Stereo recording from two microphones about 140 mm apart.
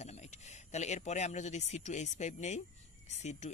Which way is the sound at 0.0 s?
55° left (ahead or behind).